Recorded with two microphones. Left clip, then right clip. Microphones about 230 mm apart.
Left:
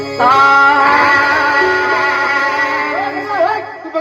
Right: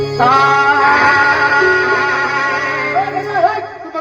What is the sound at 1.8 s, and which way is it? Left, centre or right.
Music, left.